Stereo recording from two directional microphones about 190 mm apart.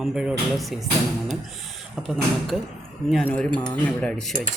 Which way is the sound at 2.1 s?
Centre (ahead or behind).